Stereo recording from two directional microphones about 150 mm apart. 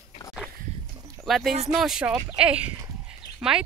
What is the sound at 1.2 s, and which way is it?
Speech, centre (ahead or behind).